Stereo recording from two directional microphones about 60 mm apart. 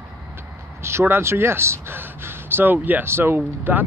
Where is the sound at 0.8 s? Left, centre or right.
Right.